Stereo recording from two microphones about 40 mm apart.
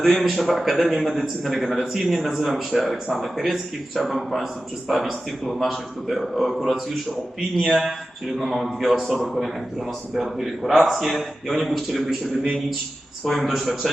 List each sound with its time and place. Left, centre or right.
0.0 s a man's voice: centre